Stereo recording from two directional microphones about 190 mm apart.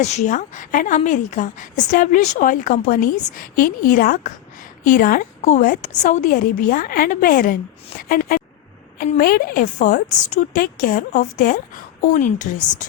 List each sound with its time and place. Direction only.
0.0 s a woman's voice: 35° left (ahead or behind)